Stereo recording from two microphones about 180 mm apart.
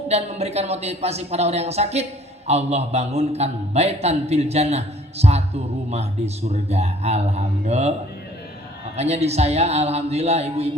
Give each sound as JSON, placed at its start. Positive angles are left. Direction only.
{"t": 0.1, "sound": "a man's voice", "side_deg": -35}
{"t": 9.0, "sound": "a man's voice", "side_deg": -35}